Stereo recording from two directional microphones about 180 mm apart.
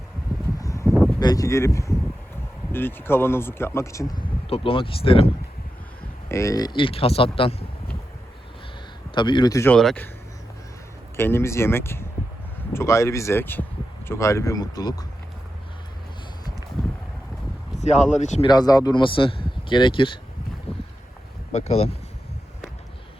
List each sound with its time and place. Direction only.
0.6 s a sound: 15° left (ahead or behind)
1.2 s speech: 20° left (ahead or behind)
4.1 s speech: 30° left (ahead or behind)
6.2 s speech: 15° left (ahead or behind)
9.1 s speech: 25° left (ahead or behind)
9.7 s speech: 5° left (ahead or behind)
11.2 s speech: 15° left (ahead or behind)
17.7 s speech: 40° left (ahead or behind)
18.4 s speech: 20° left (ahead or behind)
20.7 s boat: 35° left (ahead or behind)
21.5 s speech: 35° left (ahead or behind)